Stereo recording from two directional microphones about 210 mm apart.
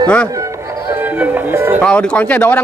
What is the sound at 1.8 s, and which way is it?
Speech, 5° left (ahead or behind).